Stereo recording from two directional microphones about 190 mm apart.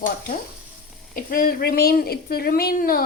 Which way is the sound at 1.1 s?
50° left (ahead or behind).